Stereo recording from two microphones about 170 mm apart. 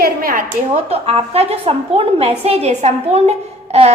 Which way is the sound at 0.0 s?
60° right (ahead or behind).